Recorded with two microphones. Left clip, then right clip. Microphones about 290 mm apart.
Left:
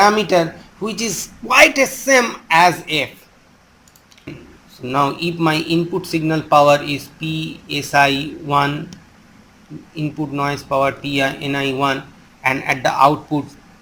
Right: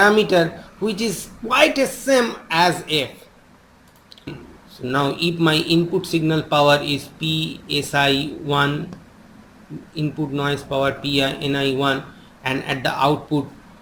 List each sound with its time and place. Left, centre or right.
0.0 s speech: centre
4.8 s speech: centre
9.9 s speech: centre